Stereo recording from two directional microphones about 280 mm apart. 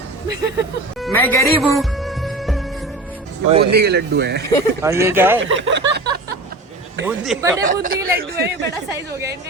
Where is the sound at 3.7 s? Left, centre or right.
Right.